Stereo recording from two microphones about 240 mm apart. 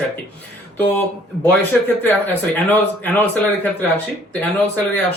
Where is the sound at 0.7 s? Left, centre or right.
Centre.